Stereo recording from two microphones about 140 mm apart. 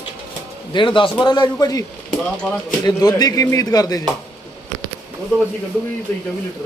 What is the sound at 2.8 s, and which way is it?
Speech, 30° left (ahead or behind).